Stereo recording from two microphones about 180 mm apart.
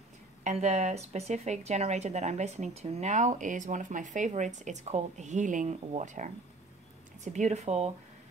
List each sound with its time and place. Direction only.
0.4 s speech: 40° right (ahead or behind)
7.3 s speech: 40° right (ahead or behind)